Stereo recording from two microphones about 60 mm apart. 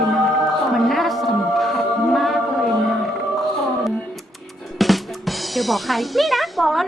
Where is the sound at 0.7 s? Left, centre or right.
Centre.